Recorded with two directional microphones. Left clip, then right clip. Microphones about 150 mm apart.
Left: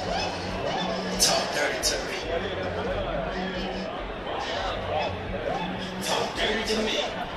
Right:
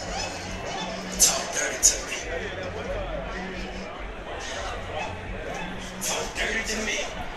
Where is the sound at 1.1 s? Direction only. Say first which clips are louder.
Right 1 dB; 50° left (ahead or behind).